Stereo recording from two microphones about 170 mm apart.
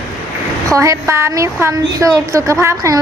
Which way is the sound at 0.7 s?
20° right (ahead or behind).